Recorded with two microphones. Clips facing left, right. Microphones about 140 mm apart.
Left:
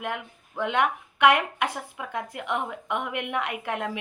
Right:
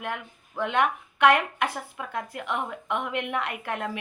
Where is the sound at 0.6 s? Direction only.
15° left (ahead or behind).